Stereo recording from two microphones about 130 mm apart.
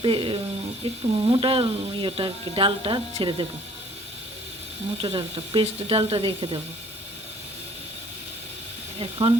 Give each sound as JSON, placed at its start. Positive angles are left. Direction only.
{"t": 0.0, "sound": "speech", "side_deg": -40}
{"t": 5.0, "sound": "speech", "side_deg": -40}
{"t": 9.0, "sound": "speech", "side_deg": -45}